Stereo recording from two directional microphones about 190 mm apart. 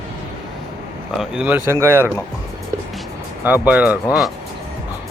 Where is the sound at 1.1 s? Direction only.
5° right (ahead or behind).